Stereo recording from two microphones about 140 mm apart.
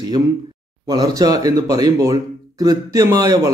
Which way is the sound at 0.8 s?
30° right (ahead or behind).